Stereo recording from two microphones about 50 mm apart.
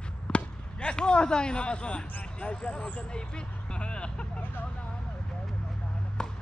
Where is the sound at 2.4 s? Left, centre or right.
Left.